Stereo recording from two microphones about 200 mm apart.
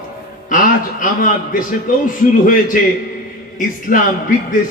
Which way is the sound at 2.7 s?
45° left (ahead or behind).